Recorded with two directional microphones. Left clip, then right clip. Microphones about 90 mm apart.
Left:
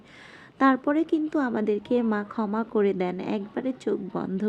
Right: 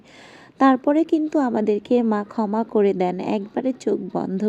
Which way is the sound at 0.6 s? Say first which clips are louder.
Right 5 dB; 25° right (ahead or behind).